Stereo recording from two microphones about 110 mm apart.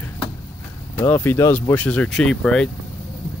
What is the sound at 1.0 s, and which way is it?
Speech, 20° left (ahead or behind).